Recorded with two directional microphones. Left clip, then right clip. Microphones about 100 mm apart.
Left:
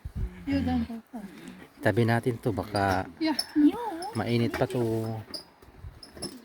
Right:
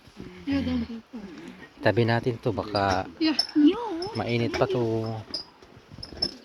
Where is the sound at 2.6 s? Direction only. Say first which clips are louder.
Right 2 dB; 65° left (ahead or behind).